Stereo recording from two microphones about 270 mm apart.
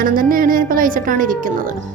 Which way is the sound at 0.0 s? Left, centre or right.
Right.